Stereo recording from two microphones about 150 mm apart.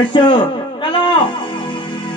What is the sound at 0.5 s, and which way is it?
Music, 30° left (ahead or behind).